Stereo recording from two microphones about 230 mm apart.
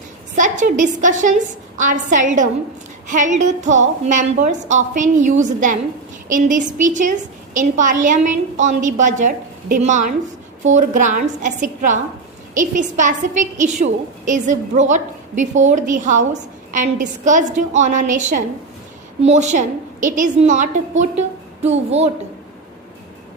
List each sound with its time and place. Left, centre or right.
0.3 s a woman's voice: right